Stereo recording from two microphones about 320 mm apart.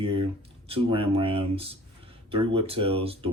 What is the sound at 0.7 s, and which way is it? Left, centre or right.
Speech, centre.